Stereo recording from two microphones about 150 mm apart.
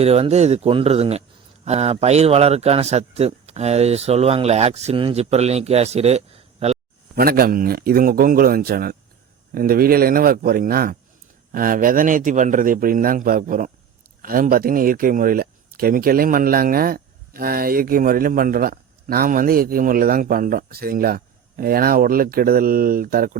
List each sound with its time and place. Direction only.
0.0 s a man's voice: 45° right (ahead or behind)
7.2 s a man's voice: 85° right